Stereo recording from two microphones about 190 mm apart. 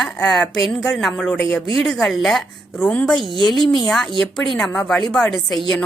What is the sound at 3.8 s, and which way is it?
Speech, 5° left (ahead or behind).